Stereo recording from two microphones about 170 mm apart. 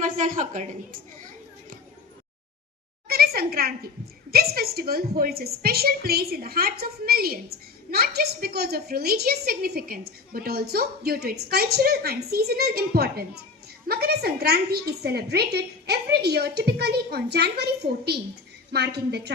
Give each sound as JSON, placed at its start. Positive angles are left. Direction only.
{"t": 0.0, "sound": "a woman's voice", "side_deg": -50}
{"t": 3.1, "sound": "a woman's voice", "side_deg": -65}